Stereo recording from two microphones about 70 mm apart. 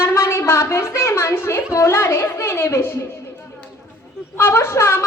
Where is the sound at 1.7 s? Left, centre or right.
Left.